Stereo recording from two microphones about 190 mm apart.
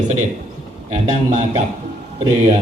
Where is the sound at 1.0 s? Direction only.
40° right (ahead or behind).